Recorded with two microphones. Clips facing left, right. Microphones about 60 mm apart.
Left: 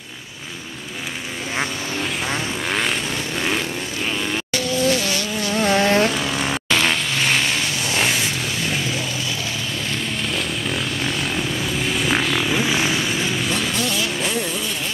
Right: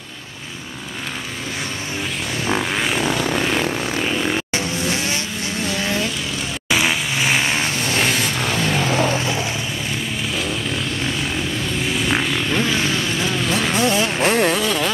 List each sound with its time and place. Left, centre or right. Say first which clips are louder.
2.7 s vehicle: even; centre
4.6 s vehicle: left 3 dB; right
5.6 s vehicle: left 7 dB; left
6.7 s vehicle: right 2 dB; centre
8.4 s vehicle: right 4 dB; right
10.3 s vehicle: right 1 dB; centre
13.6 s vehicle: right 5 dB; right
14.2 s vehicle: right 7 dB; right